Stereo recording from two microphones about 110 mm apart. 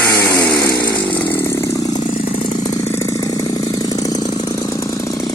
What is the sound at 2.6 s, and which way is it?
Engine, 25° left (ahead or behind).